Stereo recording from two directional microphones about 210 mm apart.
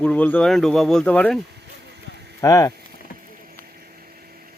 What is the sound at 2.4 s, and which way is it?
Speech, 15° left (ahead or behind).